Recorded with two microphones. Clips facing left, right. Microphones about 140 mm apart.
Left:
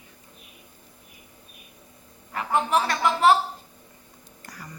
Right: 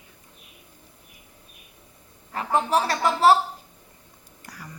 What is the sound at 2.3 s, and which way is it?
Speech, 35° right (ahead or behind).